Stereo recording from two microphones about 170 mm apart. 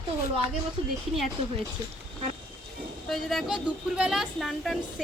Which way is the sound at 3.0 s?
Centre (ahead or behind).